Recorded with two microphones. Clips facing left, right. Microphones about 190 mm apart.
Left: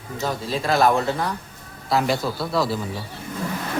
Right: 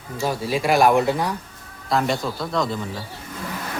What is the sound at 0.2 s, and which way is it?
A man's voice, 10° right (ahead or behind).